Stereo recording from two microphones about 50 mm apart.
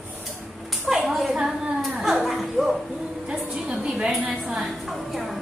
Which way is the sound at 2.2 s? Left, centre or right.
Centre.